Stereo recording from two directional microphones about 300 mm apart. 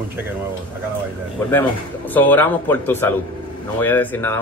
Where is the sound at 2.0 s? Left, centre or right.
Centre.